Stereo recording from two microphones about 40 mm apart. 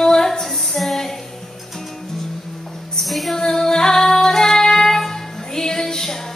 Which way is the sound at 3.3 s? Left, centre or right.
Centre.